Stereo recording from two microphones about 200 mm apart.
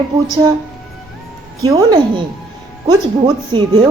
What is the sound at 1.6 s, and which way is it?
A woman's voice, 20° right (ahead or behind).